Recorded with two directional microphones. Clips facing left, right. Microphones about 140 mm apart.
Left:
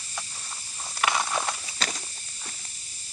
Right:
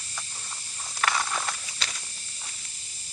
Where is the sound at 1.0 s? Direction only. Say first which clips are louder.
Left 2 dB; 15° left (ahead or behind).